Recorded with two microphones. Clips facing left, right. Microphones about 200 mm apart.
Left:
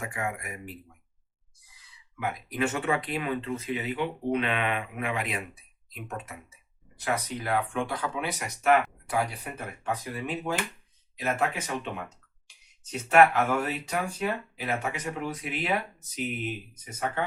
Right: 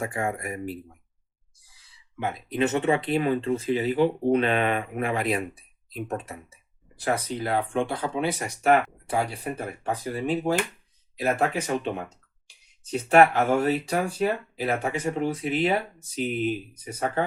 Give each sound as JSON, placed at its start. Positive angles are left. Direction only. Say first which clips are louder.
{"t": 0.0, "sound": "speech", "louder": "right 5 dB", "side_deg": -35}